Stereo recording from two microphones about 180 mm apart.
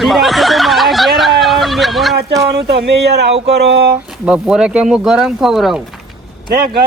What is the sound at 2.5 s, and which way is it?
Speech, 65° right (ahead or behind).